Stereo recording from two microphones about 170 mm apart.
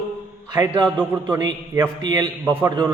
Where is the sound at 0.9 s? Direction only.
10° right (ahead or behind).